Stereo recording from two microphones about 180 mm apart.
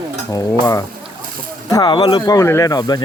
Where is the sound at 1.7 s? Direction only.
25° left (ahead or behind).